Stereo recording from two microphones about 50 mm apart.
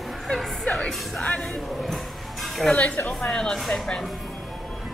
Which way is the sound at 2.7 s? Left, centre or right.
Left.